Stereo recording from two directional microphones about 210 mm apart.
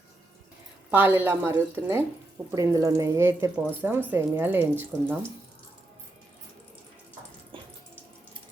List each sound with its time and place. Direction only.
0.9 s speech: 10° right (ahead or behind)
7.5 s water tap: 25° right (ahead or behind)